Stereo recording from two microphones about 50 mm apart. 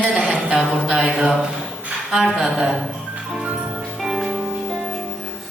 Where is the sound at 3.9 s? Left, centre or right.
Centre.